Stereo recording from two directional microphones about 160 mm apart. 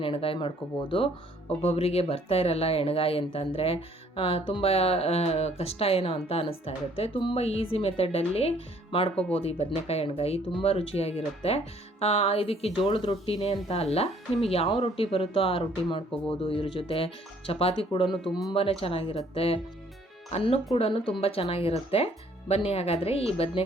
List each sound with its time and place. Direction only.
0.0 s speech: 35° left (ahead or behind)
18.1 s speech: centre (ahead or behind)
18.5 s speech: 35° left (ahead or behind)